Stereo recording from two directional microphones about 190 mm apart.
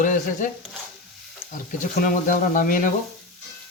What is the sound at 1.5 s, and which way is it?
Speech, 40° left (ahead or behind).